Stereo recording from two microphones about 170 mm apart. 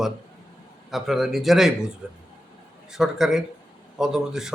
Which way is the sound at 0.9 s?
Centre (ahead or behind).